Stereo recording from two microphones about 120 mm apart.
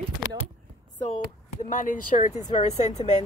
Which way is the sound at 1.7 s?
90° left.